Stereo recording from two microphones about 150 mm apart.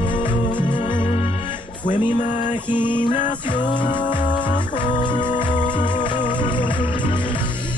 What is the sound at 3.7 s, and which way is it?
Music, 30° left (ahead or behind).